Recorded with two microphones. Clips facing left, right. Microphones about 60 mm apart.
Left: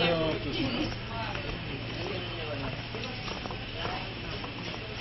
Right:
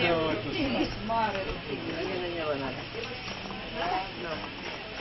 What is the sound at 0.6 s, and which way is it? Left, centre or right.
Speech, right.